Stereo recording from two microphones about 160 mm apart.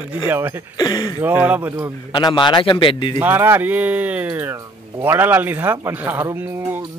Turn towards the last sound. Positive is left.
turn(degrees=-10)  # may be behind; listen again after turning